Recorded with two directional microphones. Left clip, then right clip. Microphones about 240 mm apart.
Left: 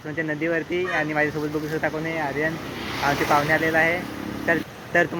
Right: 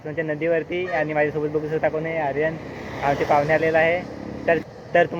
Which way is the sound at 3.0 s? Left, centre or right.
Centre.